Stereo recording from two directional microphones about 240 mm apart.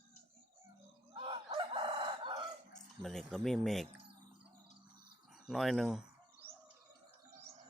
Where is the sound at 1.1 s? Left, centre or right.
Centre.